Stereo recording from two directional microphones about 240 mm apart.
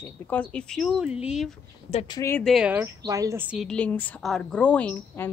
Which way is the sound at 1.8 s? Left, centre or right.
Left.